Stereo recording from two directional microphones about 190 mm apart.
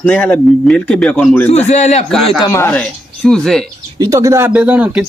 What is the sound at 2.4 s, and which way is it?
Speech, 15° left (ahead or behind).